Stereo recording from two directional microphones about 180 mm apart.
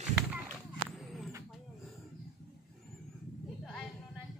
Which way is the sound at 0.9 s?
Centre (ahead or behind).